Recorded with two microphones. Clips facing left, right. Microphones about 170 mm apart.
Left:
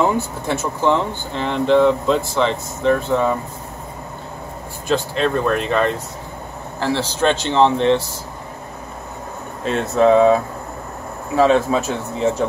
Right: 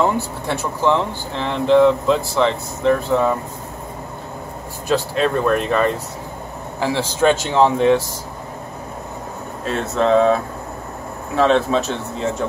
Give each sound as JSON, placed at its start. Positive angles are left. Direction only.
{"t": 0.0, "sound": "speech", "side_deg": 0}
{"t": 4.8, "sound": "speech", "side_deg": -5}
{"t": 9.9, "sound": "speech", "side_deg": 15}